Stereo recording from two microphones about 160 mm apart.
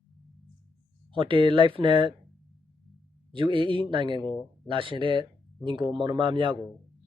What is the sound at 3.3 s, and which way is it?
Speech, 30° right (ahead or behind).